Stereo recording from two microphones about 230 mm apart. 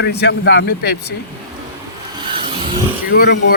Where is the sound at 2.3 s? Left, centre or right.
Right.